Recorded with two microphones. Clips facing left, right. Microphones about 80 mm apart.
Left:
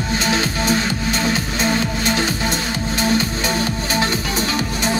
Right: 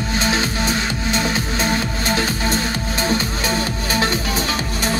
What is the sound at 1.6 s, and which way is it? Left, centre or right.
Music, left.